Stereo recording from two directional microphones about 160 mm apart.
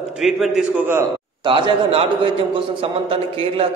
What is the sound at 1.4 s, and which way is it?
A man's voice, 30° right (ahead or behind).